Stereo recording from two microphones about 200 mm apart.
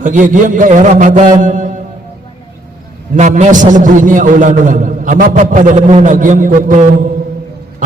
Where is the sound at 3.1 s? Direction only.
35° right (ahead or behind).